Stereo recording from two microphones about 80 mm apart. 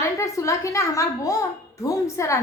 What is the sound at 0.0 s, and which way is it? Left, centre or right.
A child's voice, left.